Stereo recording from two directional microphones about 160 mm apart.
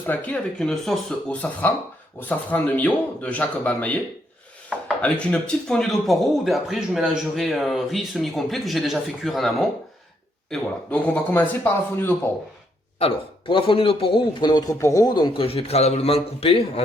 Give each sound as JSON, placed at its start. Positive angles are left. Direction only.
{"t": 0.0, "sound": "speech", "side_deg": 10}
{"t": 5.0, "sound": "speech", "side_deg": 5}
{"t": 13.0, "sound": "a man's voice", "side_deg": 35}